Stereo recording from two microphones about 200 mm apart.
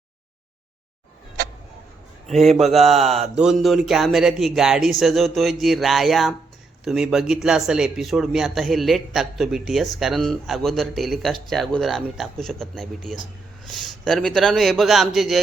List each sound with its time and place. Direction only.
2.7 s speech: centre (ahead or behind)
3.0 s mantra: 35° right (ahead or behind)
3.3 s a man's voice: 5° right (ahead or behind)